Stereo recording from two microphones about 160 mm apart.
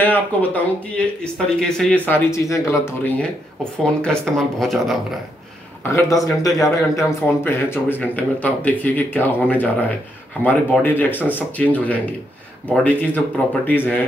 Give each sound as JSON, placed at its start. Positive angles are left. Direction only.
{"t": 0.0, "sound": "a man's voice", "side_deg": 10}
{"t": 4.0, "sound": "a woman's voice", "side_deg": 5}
{"t": 5.9, "sound": "a man's voice", "side_deg": 15}